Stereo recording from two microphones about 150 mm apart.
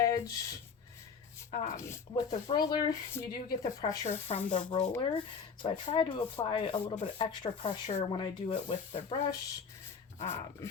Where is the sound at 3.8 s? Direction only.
45° left (ahead or behind).